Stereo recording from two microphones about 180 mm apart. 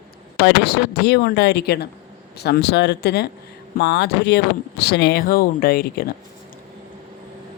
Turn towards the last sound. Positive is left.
turn(degrees=60)  # may be behind; listen again after turning